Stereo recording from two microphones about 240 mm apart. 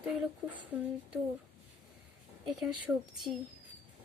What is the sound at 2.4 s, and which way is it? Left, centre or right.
Speech, centre.